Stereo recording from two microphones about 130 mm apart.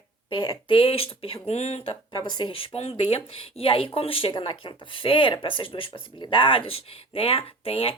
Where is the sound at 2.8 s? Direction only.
50° left (ahead or behind).